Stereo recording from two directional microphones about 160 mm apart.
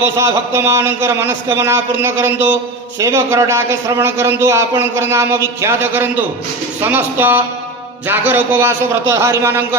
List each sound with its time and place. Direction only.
0.0 s a man's voice: 20° right (ahead or behind)